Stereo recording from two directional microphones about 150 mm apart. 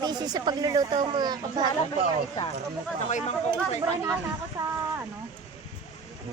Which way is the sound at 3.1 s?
50° left (ahead or behind).